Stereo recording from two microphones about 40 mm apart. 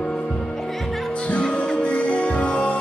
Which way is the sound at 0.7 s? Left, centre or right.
Centre.